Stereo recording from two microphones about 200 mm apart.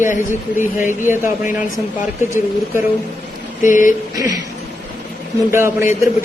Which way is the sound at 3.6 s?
40° left (ahead or behind).